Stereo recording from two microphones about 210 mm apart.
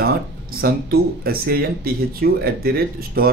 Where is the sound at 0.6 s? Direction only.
45° right (ahead or behind).